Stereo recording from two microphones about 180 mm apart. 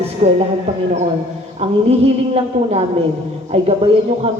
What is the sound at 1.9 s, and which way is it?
Speech, 35° right (ahead or behind).